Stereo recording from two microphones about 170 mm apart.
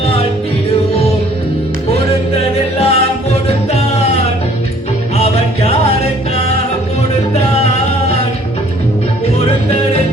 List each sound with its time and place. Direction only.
2.3 s music: 35° left (ahead or behind)